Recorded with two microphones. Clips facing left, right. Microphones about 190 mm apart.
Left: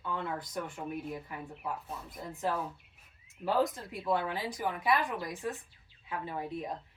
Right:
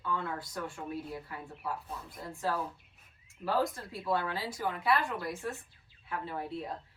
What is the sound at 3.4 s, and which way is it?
Speech, 20° left (ahead or behind).